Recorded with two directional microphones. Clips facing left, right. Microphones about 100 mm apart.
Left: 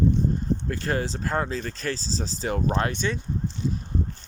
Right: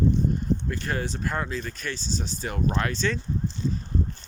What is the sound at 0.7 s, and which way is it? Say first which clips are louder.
Speech: left 3 dB; 30° left (ahead or behind).